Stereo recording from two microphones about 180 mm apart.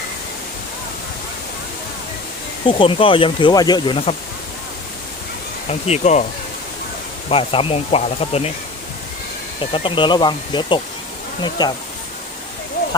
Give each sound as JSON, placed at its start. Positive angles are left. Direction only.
{"t": 2.6, "sound": "speech", "side_deg": 30}
{"t": 5.6, "sound": "speech", "side_deg": 35}
{"t": 7.3, "sound": "speech", "side_deg": 30}
{"t": 9.6, "sound": "speech", "side_deg": 30}